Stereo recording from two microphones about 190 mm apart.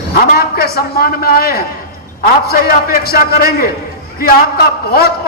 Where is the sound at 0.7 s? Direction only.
55° left (ahead or behind).